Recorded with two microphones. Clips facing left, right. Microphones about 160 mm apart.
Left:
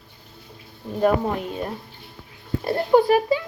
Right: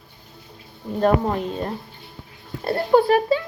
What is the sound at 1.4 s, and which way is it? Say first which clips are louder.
Speech: right 2 dB; 10° left (ahead or behind).